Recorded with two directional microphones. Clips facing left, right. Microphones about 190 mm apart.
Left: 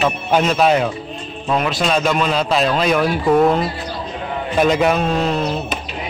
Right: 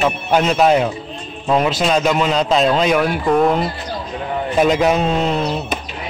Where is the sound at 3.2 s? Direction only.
Centre (ahead or behind).